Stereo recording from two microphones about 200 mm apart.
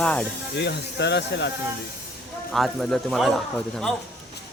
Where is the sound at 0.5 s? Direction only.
60° left (ahead or behind).